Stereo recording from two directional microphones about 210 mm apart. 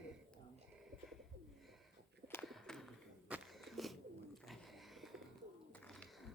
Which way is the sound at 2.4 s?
Centre (ahead or behind).